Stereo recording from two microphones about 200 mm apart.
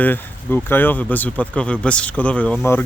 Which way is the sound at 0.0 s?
10° left (ahead or behind).